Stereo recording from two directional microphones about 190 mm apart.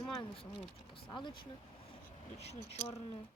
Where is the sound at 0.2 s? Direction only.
25° left (ahead or behind).